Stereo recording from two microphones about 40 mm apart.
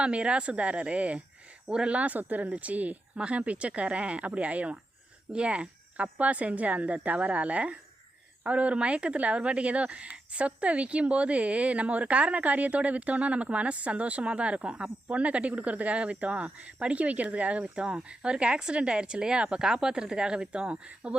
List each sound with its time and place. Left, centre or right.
0.0 s speech: right
1.6 s speech: centre
1.9 s speech: right